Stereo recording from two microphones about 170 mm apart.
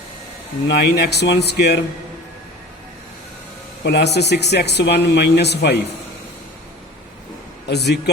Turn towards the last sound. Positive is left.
turn(degrees=80)